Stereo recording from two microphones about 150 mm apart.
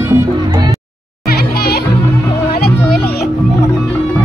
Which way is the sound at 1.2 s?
90° left.